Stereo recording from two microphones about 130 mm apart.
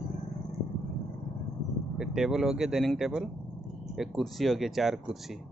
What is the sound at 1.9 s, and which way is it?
Speech, 5° right (ahead or behind).